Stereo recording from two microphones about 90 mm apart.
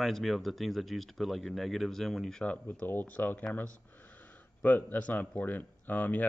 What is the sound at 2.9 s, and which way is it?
Speech, 20° left (ahead or behind).